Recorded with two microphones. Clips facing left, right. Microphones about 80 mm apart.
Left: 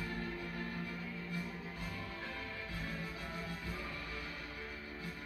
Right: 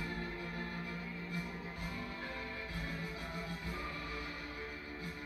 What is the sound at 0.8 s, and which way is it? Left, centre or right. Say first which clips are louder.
Music: even; right.